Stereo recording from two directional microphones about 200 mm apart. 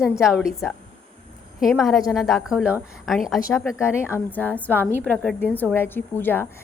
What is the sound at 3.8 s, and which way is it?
A woman's voice, 10° left (ahead or behind).